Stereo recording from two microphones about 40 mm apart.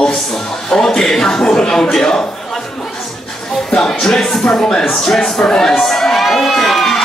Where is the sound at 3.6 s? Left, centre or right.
Centre.